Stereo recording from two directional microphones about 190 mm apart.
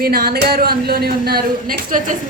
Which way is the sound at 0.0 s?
55° right (ahead or behind).